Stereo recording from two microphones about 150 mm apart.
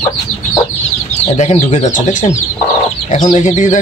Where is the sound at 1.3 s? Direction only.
50° left (ahead or behind).